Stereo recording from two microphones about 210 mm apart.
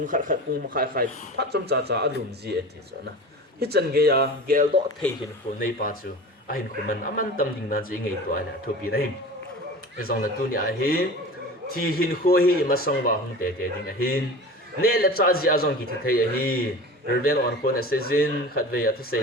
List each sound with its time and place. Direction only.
0.1 s speech: 40° right (ahead or behind)
3.6 s speech: 50° right (ahead or behind)
5.5 s a man's voice: 40° left (ahead or behind)
10.1 s a man's voice: 45° left (ahead or behind)